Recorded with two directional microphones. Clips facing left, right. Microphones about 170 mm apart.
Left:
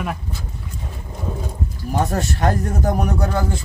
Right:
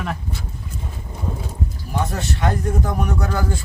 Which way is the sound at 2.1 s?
40° left (ahead or behind).